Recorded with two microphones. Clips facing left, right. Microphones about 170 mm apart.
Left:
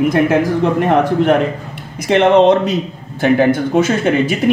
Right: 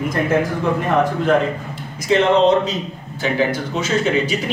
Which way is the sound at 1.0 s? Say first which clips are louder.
Left 4 dB; 70° left (ahead or behind).